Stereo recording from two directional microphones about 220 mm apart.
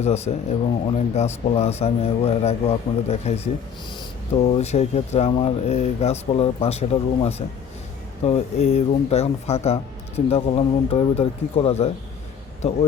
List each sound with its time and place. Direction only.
0.0 s speech: 30° left (ahead or behind)